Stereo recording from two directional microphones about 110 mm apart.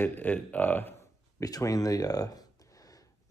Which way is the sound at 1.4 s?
35° left (ahead or behind).